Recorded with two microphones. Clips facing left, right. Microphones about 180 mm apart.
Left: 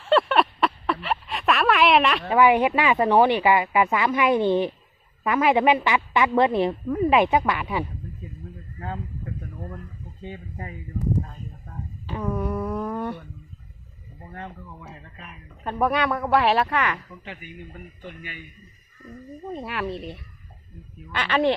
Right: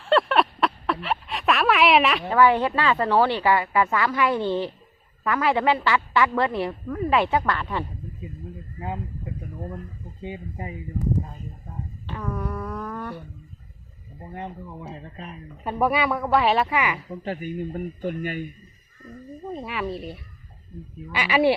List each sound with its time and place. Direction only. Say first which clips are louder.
0.0 s a sound: even; centre (ahead or behind)
2.3 s a woman's voice: left 2 dB; 15° left (ahead or behind)
10.2 s speech: right 3 dB; 15° right (ahead or behind)
12.1 s a sound: left 4 dB; 20° left (ahead or behind)
14.3 s speech: right 3 dB; 20° right (ahead or behind)
15.6 s speech: even; 5° right (ahead or behind)
17.1 s speech: right 10 dB; 40° right (ahead or behind)
19.5 s speech: even; centre (ahead or behind)